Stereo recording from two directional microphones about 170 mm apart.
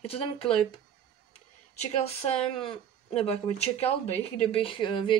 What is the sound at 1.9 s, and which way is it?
A woman's voice, 35° left (ahead or behind).